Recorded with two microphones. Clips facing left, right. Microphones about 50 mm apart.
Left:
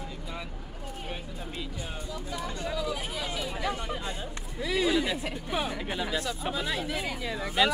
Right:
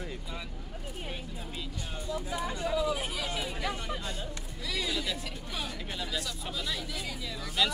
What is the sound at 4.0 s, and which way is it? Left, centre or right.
Speech, left.